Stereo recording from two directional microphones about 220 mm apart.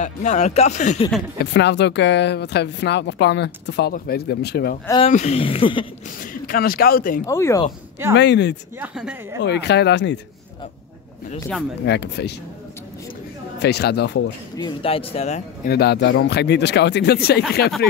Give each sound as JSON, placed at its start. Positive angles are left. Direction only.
{"t": 0.0, "sound": "speech", "side_deg": 30}
{"t": 1.4, "sound": "speech", "side_deg": 50}
{"t": 4.8, "sound": "speech", "side_deg": 20}
{"t": 6.4, "sound": "speech", "side_deg": 40}
{"t": 7.2, "sound": "speech", "side_deg": 15}
{"t": 8.2, "sound": "speech", "side_deg": 50}
{"t": 8.7, "sound": "speech", "side_deg": -5}
{"t": 9.4, "sound": "speech", "side_deg": 50}
{"t": 11.3, "sound": "speech", "side_deg": 5}
{"t": 11.8, "sound": "speech", "side_deg": 50}
{"t": 13.6, "sound": "speech", "side_deg": 50}
{"t": 14.6, "sound": "speech", "side_deg": 25}
{"t": 15.7, "sound": "speech", "side_deg": 50}